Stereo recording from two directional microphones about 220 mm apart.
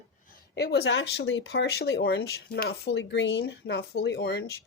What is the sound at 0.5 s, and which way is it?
Speech, 50° left (ahead or behind).